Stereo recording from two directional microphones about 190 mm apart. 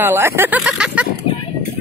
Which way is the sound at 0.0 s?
10° right (ahead or behind).